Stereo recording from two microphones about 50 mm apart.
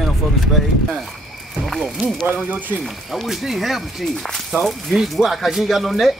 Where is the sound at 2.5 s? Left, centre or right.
Right.